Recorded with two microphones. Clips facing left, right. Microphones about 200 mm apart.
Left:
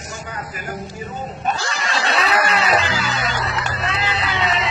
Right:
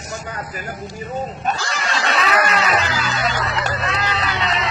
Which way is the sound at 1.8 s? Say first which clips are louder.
Even; 35° left (ahead or behind).